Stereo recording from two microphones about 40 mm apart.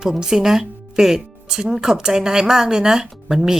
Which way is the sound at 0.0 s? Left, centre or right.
Centre.